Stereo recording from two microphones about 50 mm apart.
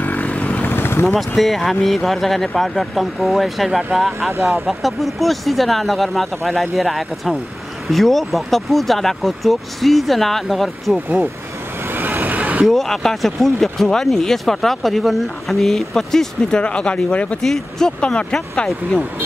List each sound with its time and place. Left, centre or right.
0.0 s vehicle: left
0.7 s vehicle: left
1.0 s speech: centre
11.9 s vehicle: right
12.6 s speech: centre; by 17.4 s left
17.4 s speech: centre